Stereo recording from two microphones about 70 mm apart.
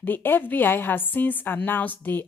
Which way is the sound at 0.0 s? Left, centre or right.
Left.